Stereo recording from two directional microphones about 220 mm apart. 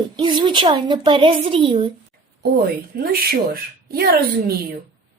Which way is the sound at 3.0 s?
40° right (ahead or behind).